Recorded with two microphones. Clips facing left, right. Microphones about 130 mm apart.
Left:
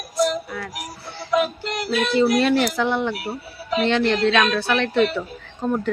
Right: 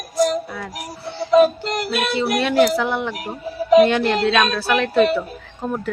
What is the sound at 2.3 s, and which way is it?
A woman's voice, 5° right (ahead or behind).